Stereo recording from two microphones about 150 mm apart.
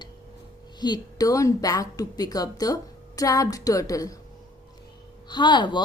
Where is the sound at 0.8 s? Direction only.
30° left (ahead or behind).